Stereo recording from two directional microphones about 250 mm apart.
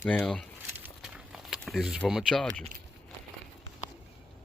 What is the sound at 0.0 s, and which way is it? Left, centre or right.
Speech, centre.